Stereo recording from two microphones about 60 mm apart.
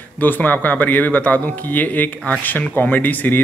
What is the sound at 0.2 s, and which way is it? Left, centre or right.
A man's voice, left.